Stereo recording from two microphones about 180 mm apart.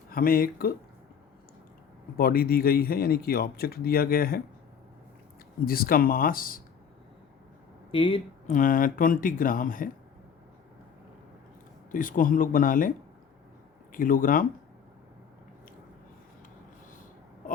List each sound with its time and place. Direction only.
0.1 s a man's voice: 55° left (ahead or behind)
2.1 s a man's voice: 55° left (ahead or behind)
5.6 s speech: 55° left (ahead or behind)
7.9 s speech: 30° left (ahead or behind)
8.4 s speech: 45° left (ahead or behind)
11.9 s speech: 50° left (ahead or behind)
13.9 s speech: 50° left (ahead or behind)